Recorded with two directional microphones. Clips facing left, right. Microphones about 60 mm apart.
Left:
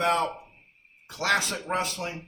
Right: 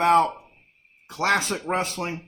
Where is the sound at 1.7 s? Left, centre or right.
Right.